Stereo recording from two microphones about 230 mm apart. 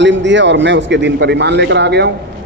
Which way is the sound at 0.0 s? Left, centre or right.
Right.